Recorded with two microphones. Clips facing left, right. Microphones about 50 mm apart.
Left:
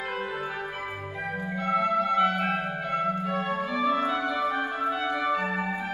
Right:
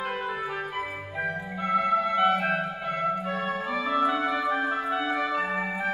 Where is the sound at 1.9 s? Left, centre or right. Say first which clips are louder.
Right 2 dB; centre.